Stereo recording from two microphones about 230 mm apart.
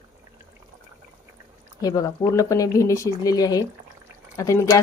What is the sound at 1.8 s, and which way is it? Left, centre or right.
A woman's voice, centre.